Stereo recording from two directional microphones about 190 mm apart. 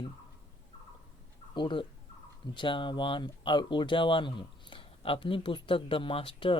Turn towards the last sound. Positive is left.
turn(degrees=30)  # may be behind; listen again after turning